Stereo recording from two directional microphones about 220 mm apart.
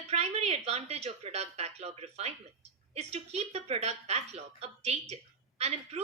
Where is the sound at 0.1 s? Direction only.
30° right (ahead or behind).